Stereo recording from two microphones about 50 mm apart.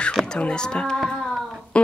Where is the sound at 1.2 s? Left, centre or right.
Centre.